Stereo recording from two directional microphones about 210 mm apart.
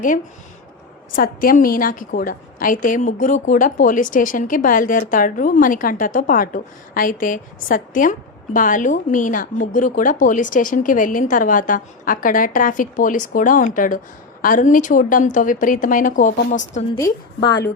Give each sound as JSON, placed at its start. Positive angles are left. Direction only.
{"t": 1.1, "sound": "a woman's voice", "side_deg": 40}
{"t": 17.0, "sound": "a woman's voice", "side_deg": 20}